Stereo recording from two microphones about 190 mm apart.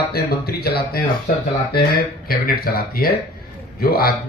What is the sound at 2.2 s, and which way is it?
Speech, 50° left (ahead or behind).